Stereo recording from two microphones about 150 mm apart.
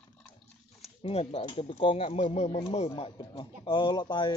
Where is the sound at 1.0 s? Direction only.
40° left (ahead or behind).